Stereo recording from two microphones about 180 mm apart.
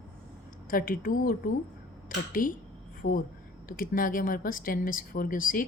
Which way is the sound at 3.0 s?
65° left (ahead or behind).